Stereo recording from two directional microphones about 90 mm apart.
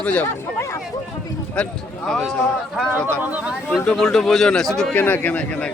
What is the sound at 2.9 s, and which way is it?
Speech, 20° right (ahead or behind).